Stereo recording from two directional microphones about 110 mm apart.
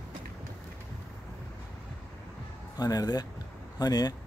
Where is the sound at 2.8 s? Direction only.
35° left (ahead or behind).